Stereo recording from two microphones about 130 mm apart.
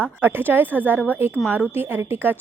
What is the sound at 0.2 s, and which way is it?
Speech, 15° right (ahead or behind).